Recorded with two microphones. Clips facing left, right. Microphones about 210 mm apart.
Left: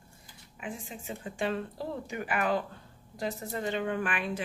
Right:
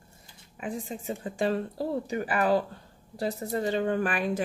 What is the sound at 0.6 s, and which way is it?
Speech, 40° right (ahead or behind).